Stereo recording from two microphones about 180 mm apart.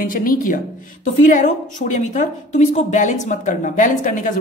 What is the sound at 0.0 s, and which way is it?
A woman's voice, 50° left (ahead or behind).